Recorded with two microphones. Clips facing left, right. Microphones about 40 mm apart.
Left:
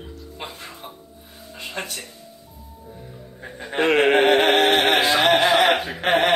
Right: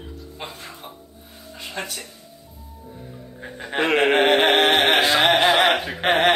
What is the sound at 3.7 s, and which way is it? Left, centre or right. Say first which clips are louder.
Speech: left 1 dB; centre.